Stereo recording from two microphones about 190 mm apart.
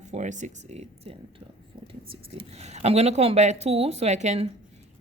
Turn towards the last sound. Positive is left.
turn(degrees=-35)  # may be behind; listen again after turning